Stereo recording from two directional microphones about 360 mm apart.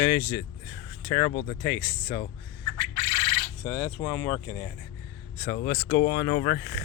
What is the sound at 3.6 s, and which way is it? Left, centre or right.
Speech, centre.